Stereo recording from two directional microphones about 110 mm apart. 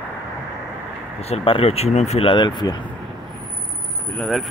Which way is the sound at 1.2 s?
60° left (ahead or behind).